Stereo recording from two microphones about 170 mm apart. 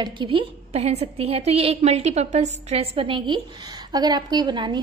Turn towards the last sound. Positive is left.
turn(degrees=-25)  # may be behind; listen again after turning